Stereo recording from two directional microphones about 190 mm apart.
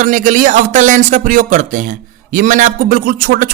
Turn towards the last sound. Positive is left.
turn(degrees=-50)  # may be behind; listen again after turning